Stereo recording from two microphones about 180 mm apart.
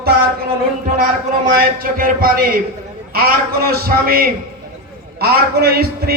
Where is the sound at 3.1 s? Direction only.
55° right (ahead or behind).